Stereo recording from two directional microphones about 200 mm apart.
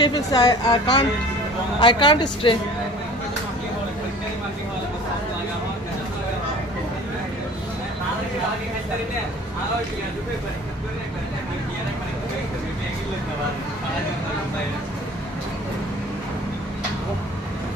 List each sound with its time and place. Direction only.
0.0 s a woman's voice: 20° left (ahead or behind)